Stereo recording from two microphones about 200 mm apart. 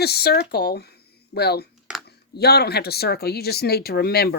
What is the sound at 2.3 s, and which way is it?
Speech, 55° left (ahead or behind).